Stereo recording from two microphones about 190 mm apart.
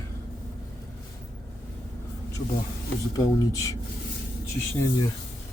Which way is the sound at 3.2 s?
15° left (ahead or behind).